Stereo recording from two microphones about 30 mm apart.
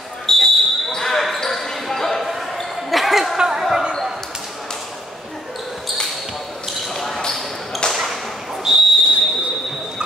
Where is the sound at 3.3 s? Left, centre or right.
Centre.